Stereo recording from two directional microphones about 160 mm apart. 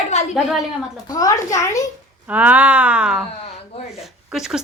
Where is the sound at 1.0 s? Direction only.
20° left (ahead or behind).